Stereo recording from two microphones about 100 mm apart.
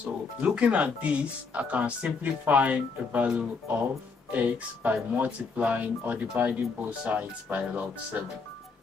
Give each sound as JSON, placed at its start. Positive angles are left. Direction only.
{"t": 0.0, "sound": "speech", "side_deg": -10}